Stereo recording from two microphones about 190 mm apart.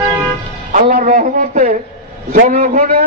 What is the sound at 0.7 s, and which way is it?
A man's voice, 45° right (ahead or behind).